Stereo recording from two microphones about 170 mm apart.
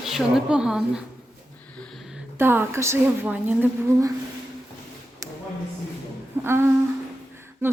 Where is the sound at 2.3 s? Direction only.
15° right (ahead or behind).